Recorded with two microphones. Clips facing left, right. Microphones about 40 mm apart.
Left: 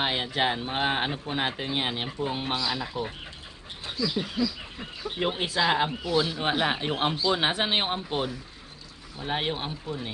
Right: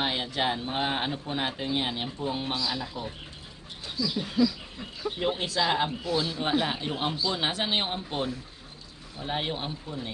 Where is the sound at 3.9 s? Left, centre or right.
Left.